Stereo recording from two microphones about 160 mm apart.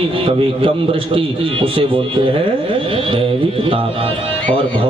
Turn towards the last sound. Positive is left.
turn(degrees=-30)  # may be behind; listen again after turning